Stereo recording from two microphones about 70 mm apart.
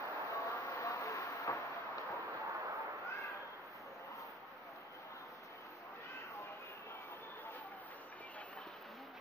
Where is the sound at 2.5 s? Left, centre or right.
Right.